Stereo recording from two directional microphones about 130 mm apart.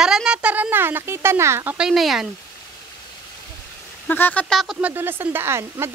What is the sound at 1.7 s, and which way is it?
Speech, 5° right (ahead or behind).